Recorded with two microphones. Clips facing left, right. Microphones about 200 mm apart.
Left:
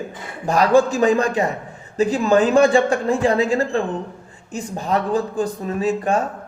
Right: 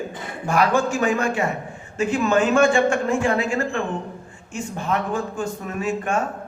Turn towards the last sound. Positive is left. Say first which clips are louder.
# left 4 dB
turn(degrees=35)  # may be behind; listen again after turning